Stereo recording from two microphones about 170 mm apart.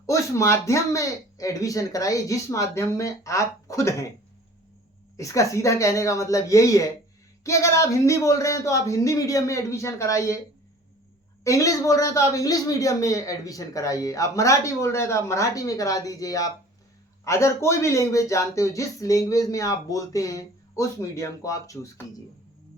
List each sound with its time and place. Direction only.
0.0 s speech: 20° left (ahead or behind)
5.1 s speech: 20° left (ahead or behind)
11.4 s speech: 20° left (ahead or behind)